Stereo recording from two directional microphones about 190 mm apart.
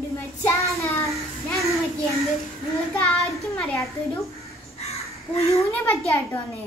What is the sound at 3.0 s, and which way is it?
Child singing, centre (ahead or behind).